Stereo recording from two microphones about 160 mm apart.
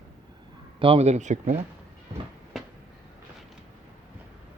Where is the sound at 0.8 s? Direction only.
35° right (ahead or behind).